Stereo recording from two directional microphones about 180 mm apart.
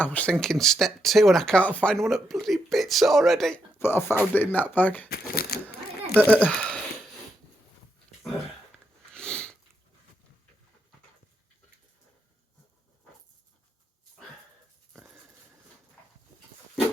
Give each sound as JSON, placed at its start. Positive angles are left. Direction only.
{"t": 0.0, "sound": "speech", "side_deg": 10}
{"t": 3.8, "sound": "speech", "side_deg": 10}
{"t": 5.0, "sound": "a sound", "side_deg": 60}
{"t": 6.1, "sound": "speech", "side_deg": -10}
{"t": 6.5, "sound": "speech", "side_deg": 5}
{"t": 9.1, "sound": "a sound", "side_deg": 5}
{"t": 14.9, "sound": "wheeze", "side_deg": -10}